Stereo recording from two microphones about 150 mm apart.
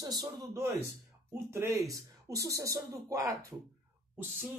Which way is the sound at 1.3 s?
15° right (ahead or behind).